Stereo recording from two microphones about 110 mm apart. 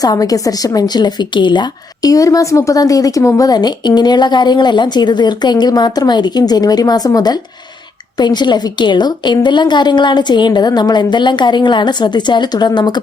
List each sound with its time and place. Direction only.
0.0 s a woman's voice: 35° left (ahead or behind)